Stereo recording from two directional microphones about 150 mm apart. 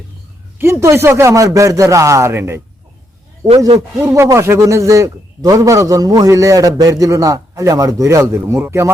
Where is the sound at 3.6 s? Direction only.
25° right (ahead or behind).